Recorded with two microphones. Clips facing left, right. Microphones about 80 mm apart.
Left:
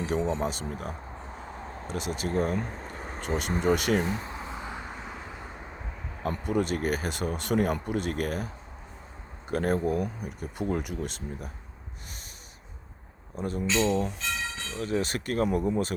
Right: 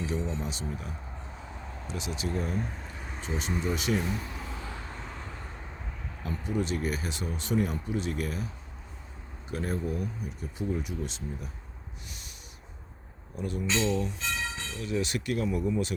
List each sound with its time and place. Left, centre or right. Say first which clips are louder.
0.0 s speech: left 5 dB; left
4.0 s a sound: left 2 dB; left
6.2 s speech: left 4 dB; left
9.5 s speech: left 6 dB; left
13.3 s speech: left 3 dB; left